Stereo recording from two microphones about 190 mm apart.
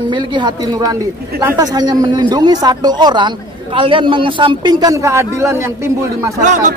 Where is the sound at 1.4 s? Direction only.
20° right (ahead or behind).